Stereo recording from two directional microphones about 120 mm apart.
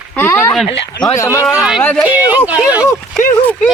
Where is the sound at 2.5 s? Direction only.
10° right (ahead or behind).